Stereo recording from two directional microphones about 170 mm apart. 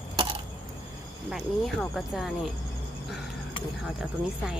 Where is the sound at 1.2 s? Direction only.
Centre (ahead or behind).